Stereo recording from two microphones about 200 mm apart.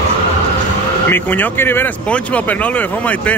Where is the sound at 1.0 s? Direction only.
10° left (ahead or behind).